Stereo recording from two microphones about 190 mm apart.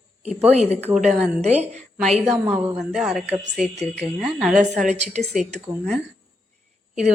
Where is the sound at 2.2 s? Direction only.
10° right (ahead or behind).